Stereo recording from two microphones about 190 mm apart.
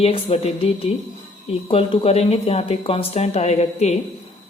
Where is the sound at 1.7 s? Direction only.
30° left (ahead or behind).